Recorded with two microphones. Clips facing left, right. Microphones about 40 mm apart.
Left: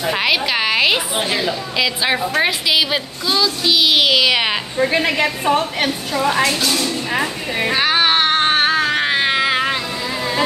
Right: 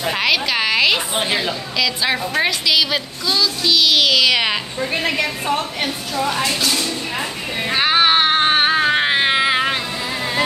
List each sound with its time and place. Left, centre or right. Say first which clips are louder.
0.0 s a woman's voice: left 1 dB; centre
1.1 s a woman's voice: even; centre
2.7 s speech: left 1 dB; centre
4.7 s a woman's voice: left 4 dB; left
5.2 s a woman's voice: left 4 dB; left
6.6 s speech: left 1 dB; centre
7.7 s a sound: right 1 dB; centre